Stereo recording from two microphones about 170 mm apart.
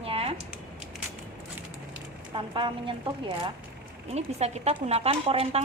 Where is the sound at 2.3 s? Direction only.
30° right (ahead or behind).